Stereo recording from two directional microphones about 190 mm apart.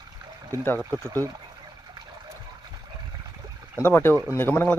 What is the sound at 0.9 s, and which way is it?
Speech, 15° right (ahead or behind).